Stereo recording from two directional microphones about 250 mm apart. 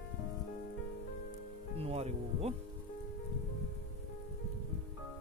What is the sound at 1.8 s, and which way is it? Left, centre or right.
Speech, right.